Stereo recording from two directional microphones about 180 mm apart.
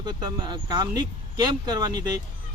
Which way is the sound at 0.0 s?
20° right (ahead or behind).